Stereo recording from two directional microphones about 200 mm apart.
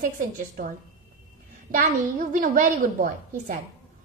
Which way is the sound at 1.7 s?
45° right (ahead or behind).